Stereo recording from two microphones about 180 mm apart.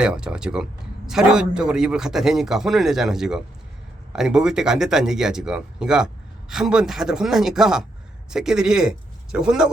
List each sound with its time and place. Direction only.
0.0 s speech: 5° right (ahead or behind)